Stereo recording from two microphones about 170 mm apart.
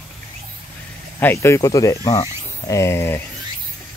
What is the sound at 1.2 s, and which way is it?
Speech, 15° left (ahead or behind).